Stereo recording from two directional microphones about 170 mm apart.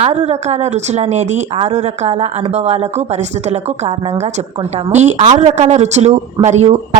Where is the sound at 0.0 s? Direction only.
40° right (ahead or behind).